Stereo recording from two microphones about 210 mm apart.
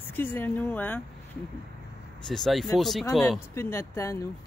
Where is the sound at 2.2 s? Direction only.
Centre (ahead or behind).